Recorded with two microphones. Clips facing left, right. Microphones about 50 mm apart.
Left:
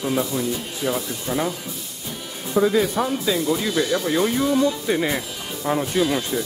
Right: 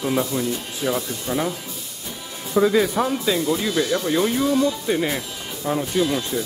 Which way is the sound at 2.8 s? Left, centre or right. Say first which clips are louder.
Right 1 dB; centre.